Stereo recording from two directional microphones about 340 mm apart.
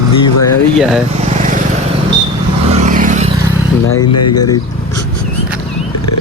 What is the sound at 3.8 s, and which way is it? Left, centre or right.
Speech, left.